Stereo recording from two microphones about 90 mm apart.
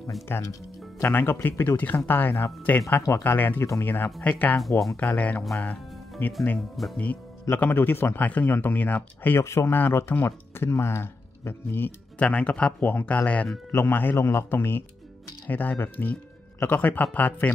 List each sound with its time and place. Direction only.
0.3 s speech: 25° left (ahead or behind)
5.6 s music: 20° left (ahead or behind)
6.8 s speech: centre (ahead or behind)
7.4 s speech: 25° left (ahead or behind)
12.2 s speech: 15° left (ahead or behind)
13.7 s speech: 25° left (ahead or behind)